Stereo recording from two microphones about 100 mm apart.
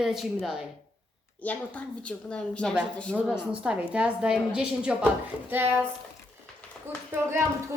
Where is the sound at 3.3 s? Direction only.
10° right (ahead or behind).